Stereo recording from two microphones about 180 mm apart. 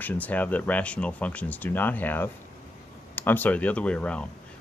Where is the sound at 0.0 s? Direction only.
10° left (ahead or behind).